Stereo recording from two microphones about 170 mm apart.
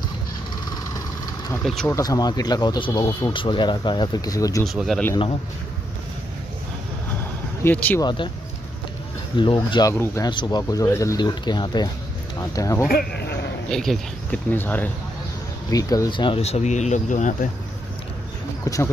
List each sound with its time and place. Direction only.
1.5 s speech: 5° left (ahead or behind)
1.9 s speech: 20° left (ahead or behind)
4.6 s speech: centre (ahead or behind)
7.6 s speech: 10° left (ahead or behind)
8.0 s speech: 25° left (ahead or behind)
9.4 s speech: 30° left (ahead or behind)
12.8 s speech: 65° left (ahead or behind)
13.7 s speech: 5° left (ahead or behind)
15.7 s speech: 20° left (ahead or behind); by 17.5 s 50° left (ahead or behind)